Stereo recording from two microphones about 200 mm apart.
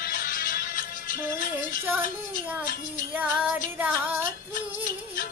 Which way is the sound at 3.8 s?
10° right (ahead or behind).